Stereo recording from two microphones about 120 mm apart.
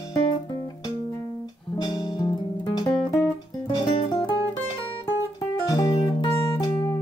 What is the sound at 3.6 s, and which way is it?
Music, 40° left (ahead or behind).